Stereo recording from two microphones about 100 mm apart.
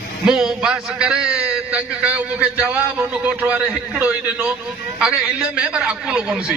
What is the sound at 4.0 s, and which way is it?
A man's voice, 10° right (ahead or behind).